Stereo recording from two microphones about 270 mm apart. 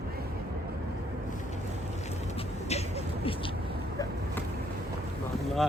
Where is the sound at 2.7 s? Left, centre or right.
Left.